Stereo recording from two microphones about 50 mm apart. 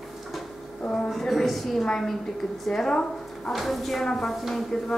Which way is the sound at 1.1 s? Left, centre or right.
Centre.